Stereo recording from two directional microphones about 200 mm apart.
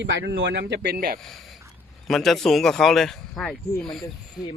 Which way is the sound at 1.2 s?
Centre (ahead or behind).